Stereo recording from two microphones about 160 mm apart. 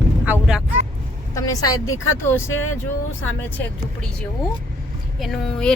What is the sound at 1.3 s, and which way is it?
A woman's voice, 20° left (ahead or behind).